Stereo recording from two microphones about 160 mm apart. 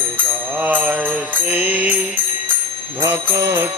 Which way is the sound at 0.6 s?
10° right (ahead or behind).